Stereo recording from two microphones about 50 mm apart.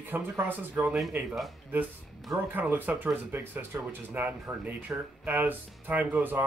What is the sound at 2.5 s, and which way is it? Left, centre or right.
Speech, right.